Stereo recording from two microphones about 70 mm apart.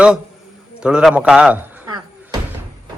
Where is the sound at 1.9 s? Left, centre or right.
Right.